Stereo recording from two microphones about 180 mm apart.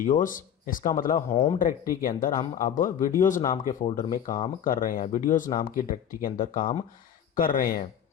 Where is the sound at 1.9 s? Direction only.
50° left (ahead or behind).